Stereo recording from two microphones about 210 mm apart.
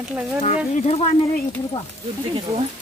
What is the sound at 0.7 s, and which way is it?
Speech, 30° left (ahead or behind).